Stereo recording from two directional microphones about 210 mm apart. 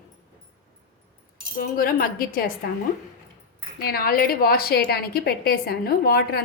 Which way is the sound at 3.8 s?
45° left (ahead or behind).